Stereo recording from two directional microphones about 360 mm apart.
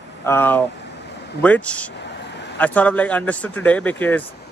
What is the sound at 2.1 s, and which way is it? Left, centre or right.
Vehicle, left.